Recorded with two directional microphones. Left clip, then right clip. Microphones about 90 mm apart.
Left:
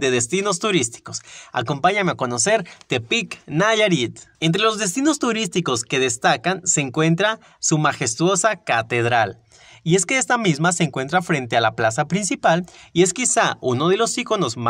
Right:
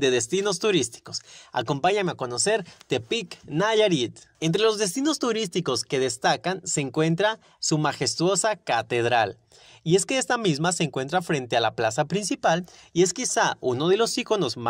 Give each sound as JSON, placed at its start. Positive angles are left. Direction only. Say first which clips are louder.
{"t": 0.0, "sound": "speech", "louder": "left 3 dB", "side_deg": -25}
{"t": 1.7, "sound": "speech", "louder": "left 4 dB", "side_deg": -35}
{"t": 2.0, "sound": "speech", "louder": "left 5 dB", "side_deg": -5}
{"t": 2.6, "sound": "speech", "louder": "left 4 dB", "side_deg": -15}
{"t": 9.8, "sound": "speech", "louder": "left 4 dB", "side_deg": -20}
{"t": 12.9, "sound": "speech", "louder": "left 5 dB", "side_deg": -5}
{"t": 13.8, "sound": "speech", "louder": "left 2 dB", "side_deg": -25}